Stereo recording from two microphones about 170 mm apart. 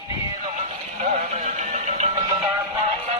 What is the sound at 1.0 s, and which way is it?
Music, 45° right (ahead or behind).